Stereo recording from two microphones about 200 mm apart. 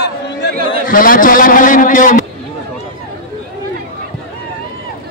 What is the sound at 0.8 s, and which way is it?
A man's voice, 45° left (ahead or behind).